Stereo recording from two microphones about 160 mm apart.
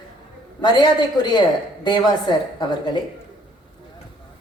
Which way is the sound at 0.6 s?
25° left (ahead or behind).